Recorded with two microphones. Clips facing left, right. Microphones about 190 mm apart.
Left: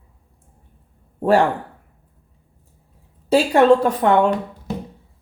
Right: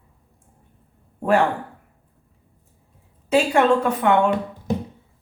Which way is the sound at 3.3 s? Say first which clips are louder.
Left 4 dB; 35° left (ahead or behind).